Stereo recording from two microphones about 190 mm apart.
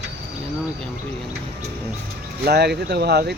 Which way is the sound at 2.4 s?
60° right (ahead or behind).